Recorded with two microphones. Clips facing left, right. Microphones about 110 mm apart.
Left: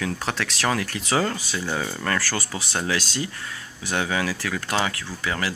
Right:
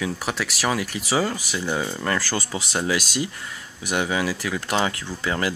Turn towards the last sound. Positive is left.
turn(degrees=-25)  # may be behind; listen again after turning